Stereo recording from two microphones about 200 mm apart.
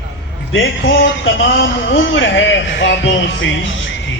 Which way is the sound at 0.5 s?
65° left (ahead or behind).